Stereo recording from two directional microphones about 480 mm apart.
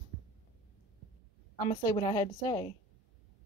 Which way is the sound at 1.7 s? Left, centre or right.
Centre.